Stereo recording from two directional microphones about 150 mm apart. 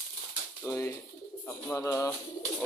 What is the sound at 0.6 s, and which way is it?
Speech, 20° left (ahead or behind).